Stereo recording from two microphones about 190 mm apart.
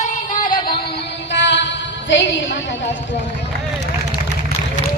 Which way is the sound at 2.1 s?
75° left (ahead or behind).